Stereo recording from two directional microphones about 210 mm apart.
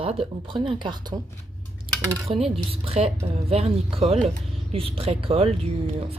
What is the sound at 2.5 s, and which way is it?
Speech, 30° right (ahead or behind).